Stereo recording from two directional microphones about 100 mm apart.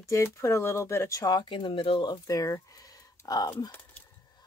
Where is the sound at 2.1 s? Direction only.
40° left (ahead or behind).